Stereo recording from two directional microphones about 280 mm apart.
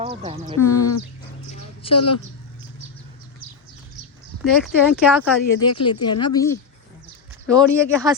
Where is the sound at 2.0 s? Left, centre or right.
Left.